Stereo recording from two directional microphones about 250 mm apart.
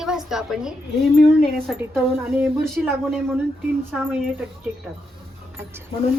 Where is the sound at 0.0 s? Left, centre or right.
Centre.